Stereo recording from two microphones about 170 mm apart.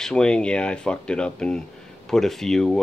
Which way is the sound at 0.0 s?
5° left (ahead or behind).